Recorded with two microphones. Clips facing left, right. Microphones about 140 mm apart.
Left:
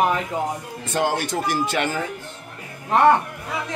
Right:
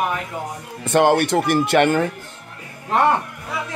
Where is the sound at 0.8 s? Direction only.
65° right (ahead or behind).